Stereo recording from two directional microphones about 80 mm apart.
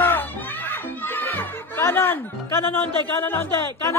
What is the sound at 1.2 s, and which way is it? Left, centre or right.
Speech, left.